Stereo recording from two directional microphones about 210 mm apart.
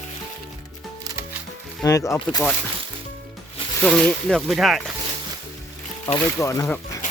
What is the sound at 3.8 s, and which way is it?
Speech, centre (ahead or behind).